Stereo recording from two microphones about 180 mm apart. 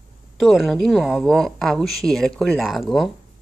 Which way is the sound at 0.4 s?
Centre (ahead or behind).